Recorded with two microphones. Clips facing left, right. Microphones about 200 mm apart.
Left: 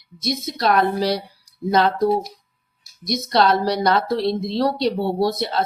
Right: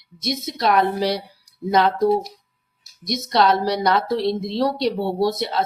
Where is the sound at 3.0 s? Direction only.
20° right (ahead or behind).